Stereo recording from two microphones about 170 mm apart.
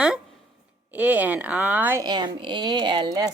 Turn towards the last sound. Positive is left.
turn(degrees=-25)  # may be behind; listen again after turning